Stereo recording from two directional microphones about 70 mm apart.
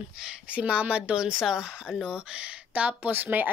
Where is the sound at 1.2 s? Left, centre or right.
Centre; by 3.5 s right.